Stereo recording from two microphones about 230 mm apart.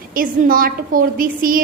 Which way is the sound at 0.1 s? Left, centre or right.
Right.